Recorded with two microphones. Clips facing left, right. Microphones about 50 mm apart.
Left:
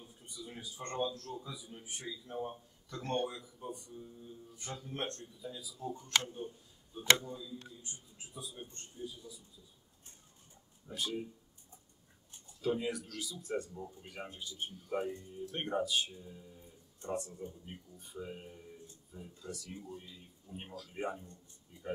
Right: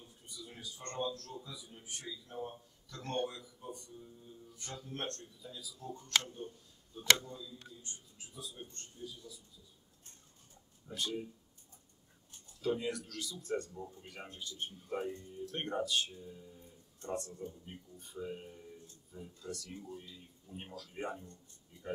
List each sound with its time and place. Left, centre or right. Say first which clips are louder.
0.0 s a man's voice: left 2 dB; centre
10.9 s a man's voice: even; centre
12.6 s speech: left 1 dB; centre